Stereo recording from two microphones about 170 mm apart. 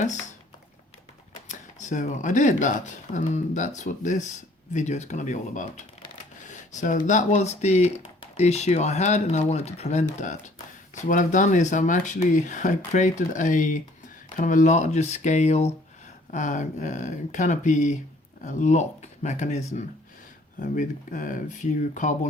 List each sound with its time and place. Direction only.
1.5 s speech: 45° left (ahead or behind)